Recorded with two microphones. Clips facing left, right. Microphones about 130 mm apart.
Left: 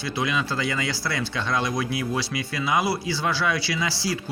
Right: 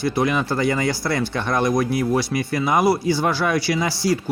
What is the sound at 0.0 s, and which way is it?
Speech, 45° right (ahead or behind).